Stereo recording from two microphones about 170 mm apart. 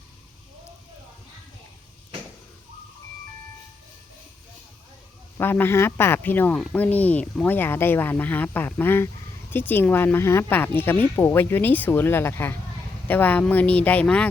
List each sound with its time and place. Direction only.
5.4 s speech: 15° left (ahead or behind)